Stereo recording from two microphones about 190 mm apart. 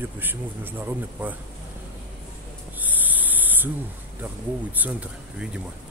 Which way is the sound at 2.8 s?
10° right (ahead or behind).